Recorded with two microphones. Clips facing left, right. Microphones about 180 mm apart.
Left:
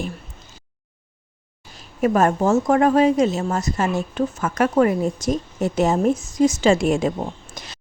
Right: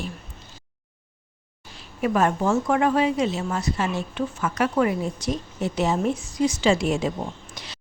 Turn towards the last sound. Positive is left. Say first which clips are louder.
# left 2 dB
turn(degrees=45)  # may be behind; listen again after turning